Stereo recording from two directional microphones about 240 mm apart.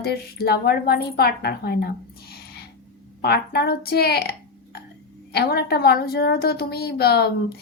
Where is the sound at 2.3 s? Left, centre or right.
Left.